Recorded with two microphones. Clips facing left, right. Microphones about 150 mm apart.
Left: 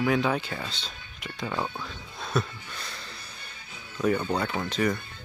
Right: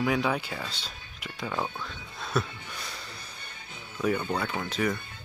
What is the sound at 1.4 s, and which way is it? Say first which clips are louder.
Speech: left 1 dB; 5° left (ahead or behind).